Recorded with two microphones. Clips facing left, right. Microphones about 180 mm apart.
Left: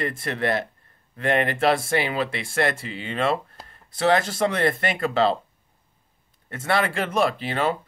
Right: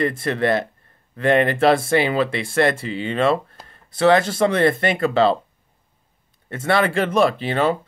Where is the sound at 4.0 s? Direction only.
60° right (ahead or behind).